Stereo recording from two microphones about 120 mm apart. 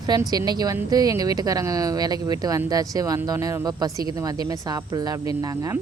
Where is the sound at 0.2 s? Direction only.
35° right (ahead or behind).